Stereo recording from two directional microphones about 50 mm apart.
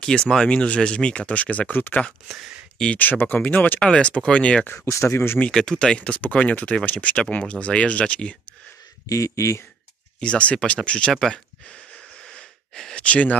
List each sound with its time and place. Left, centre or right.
0.0 s speech: centre; by 2.0 s left
2.2 s speech: centre
3.0 s speech: left
3.8 s speech: centre
4.7 s speech: left
5.5 s speech: centre
5.9 s speech: left
9.1 s speech: left
10.2 s speech: left
11.1 s speech: centre
12.3 s wheeze: centre
13.0 s speech: left